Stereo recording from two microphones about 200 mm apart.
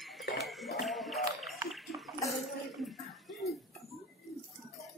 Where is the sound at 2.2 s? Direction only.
Centre (ahead or behind).